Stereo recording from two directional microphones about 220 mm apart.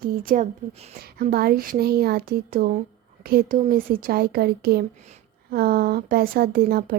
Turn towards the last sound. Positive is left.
turn(degrees=-45)  # may be behind; listen again after turning